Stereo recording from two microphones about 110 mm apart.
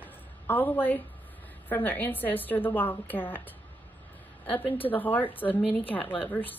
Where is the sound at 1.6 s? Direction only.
15° left (ahead or behind).